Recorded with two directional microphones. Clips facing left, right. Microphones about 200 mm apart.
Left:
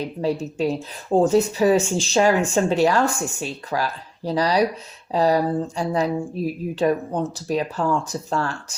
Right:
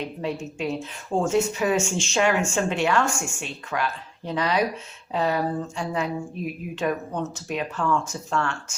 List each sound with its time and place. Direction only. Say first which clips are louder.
0.0 s speech: left 5 dB; 35° left (ahead or behind)